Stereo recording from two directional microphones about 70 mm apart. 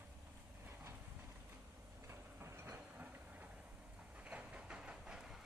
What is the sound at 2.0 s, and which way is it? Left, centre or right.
Train, right.